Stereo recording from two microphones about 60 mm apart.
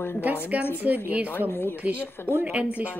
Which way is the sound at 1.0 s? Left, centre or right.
Right.